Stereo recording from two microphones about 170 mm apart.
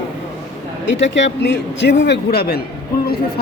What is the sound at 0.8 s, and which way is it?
A man's voice, 90° left.